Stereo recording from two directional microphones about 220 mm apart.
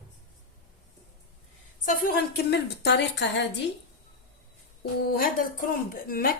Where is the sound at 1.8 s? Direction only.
40° left (ahead or behind).